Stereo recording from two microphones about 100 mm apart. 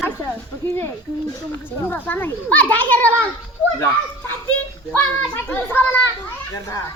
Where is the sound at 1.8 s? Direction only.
20° left (ahead or behind).